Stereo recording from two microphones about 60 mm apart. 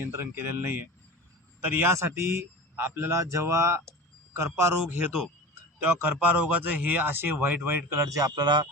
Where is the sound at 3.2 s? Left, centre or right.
Right.